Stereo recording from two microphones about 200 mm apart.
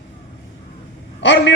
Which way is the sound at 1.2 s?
60° left (ahead or behind).